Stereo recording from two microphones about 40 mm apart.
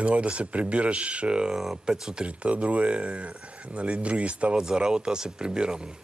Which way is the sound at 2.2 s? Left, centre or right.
Right.